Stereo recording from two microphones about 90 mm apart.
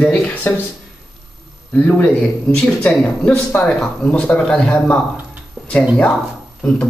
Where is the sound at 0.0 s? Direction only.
15° left (ahead or behind).